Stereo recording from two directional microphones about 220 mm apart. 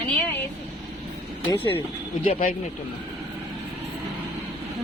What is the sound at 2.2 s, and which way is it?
Speech, 35° left (ahead or behind).